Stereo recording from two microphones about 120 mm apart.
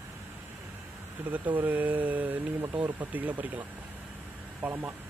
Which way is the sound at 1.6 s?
15° right (ahead or behind).